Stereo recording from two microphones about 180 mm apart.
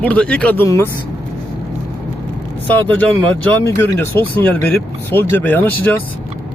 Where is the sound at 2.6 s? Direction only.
10° left (ahead or behind).